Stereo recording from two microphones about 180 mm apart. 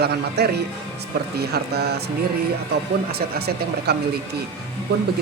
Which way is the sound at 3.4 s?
60° right (ahead or behind).